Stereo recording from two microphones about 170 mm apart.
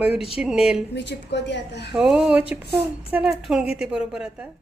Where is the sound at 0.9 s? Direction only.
90° left.